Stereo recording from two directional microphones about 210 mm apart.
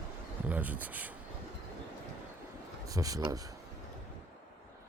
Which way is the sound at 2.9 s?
15° right (ahead or behind).